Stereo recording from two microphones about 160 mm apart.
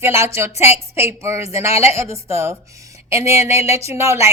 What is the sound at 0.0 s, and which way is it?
A woman's voice, 15° right (ahead or behind).